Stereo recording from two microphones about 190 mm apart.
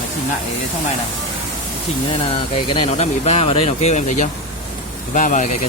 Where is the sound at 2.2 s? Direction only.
30° left (ahead or behind).